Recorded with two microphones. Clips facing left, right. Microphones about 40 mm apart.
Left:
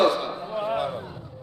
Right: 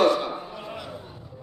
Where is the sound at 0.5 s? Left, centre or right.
Left.